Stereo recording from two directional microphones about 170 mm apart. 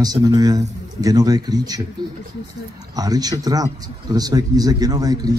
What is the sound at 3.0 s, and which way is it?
Speech, 20° right (ahead or behind).